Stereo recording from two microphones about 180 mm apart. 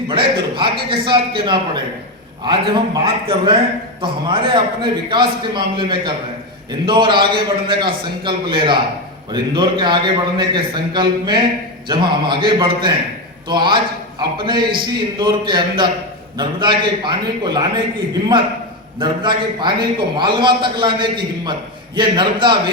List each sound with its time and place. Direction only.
0.1 s a man's voice: 25° right (ahead or behind)